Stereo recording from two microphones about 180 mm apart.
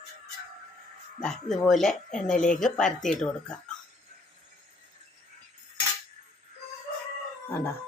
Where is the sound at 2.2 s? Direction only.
45° left (ahead or behind).